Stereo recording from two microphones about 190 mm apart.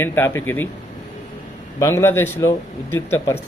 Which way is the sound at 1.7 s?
15° left (ahead or behind).